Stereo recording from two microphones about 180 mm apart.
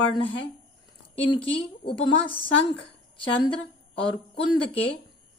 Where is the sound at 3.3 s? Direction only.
30° left (ahead or behind).